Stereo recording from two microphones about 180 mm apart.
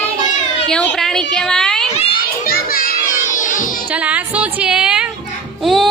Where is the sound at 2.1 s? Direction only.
55° left (ahead or behind).